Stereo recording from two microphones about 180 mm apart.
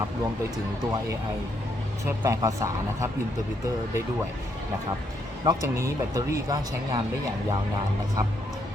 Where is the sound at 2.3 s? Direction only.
20° right (ahead or behind).